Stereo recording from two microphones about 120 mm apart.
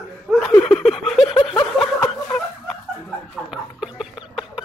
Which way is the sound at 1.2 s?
45° left (ahead or behind).